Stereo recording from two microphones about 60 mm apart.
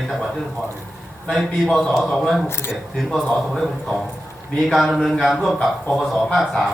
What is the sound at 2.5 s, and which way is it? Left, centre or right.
Speech, left.